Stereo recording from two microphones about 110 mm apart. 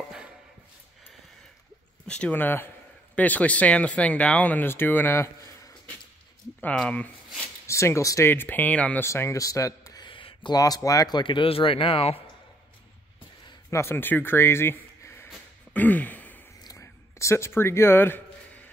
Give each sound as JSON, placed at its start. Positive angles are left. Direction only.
{"t": 2.0, "sound": "speech", "side_deg": 10}
{"t": 6.6, "sound": "speech", "side_deg": 10}
{"t": 7.6, "sound": "speech", "side_deg": 25}
{"t": 9.0, "sound": "a man's voice", "side_deg": 25}
{"t": 10.0, "sound": "a sound", "side_deg": 50}
{"t": 10.6, "sound": "speech", "side_deg": 30}
{"t": 13.7, "sound": "speech", "side_deg": 25}
{"t": 15.7, "sound": "a sound", "side_deg": 15}
{"t": 16.6, "sound": "a sound", "side_deg": 25}